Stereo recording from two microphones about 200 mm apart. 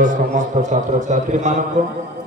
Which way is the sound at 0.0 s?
40° right (ahead or behind).